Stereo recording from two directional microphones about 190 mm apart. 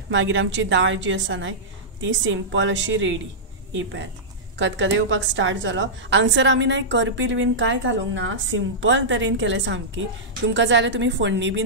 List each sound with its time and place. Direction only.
0.1 s a woman's voice: 75° right (ahead or behind)